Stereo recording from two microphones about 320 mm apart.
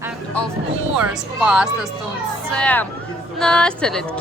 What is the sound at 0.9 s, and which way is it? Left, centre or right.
A woman's voice, centre.